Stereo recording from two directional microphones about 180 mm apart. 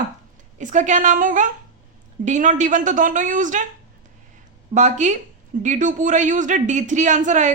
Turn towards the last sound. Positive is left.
turn(degrees=-40)  # may be behind; listen again after turning